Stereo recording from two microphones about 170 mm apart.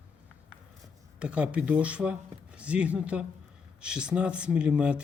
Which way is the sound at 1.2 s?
5° right (ahead or behind).